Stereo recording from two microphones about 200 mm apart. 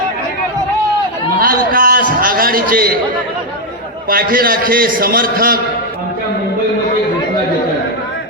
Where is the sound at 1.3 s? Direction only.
45° right (ahead or behind).